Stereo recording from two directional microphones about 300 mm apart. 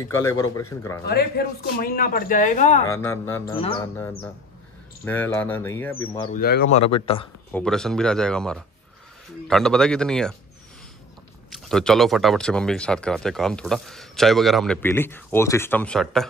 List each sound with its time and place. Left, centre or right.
0.2 s speech: centre
1.0 s speech: left
2.9 s speech: centre
6.3 s speech: left
7.5 s speech: centre
11.5 s speech: centre